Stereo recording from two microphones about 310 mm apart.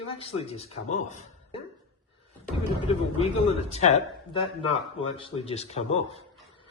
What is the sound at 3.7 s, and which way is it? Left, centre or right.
Speech, left.